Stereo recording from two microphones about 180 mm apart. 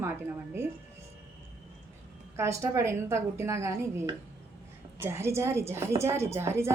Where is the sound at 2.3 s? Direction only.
15° right (ahead or behind).